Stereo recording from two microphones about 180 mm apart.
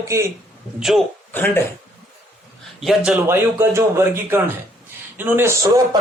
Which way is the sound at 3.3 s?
15° right (ahead or behind).